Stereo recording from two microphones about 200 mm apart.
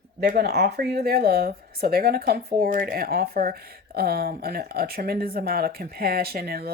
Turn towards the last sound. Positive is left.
turn(degrees=-50)  # may be behind; listen again after turning